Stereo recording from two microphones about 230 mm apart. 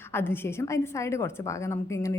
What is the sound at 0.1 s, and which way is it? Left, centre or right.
A woman's voice, centre.